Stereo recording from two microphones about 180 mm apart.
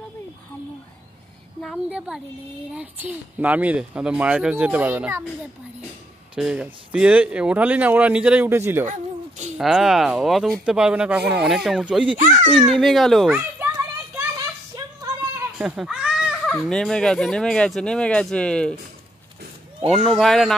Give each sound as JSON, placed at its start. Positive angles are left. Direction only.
{"t": 1.6, "sound": "a woman's voice", "side_deg": 0}
{"t": 6.3, "sound": "speech", "side_deg": -5}
{"t": 8.8, "sound": "a sound", "side_deg": -40}
{"t": 9.6, "sound": "fowl", "side_deg": -5}
{"t": 12.2, "sound": "a child's voice", "side_deg": -45}
{"t": 12.8, "sound": "fowl", "side_deg": 0}
{"t": 13.6, "sound": "children playing", "side_deg": -15}
{"t": 15.5, "sound": "a sound", "side_deg": -5}
{"t": 16.5, "sound": "fowl", "side_deg": 5}
{"t": 19.9, "sound": "fowl", "side_deg": 0}